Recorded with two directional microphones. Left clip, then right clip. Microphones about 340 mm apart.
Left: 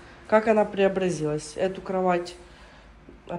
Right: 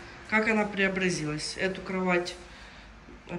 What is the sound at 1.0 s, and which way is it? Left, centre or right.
Speech, left.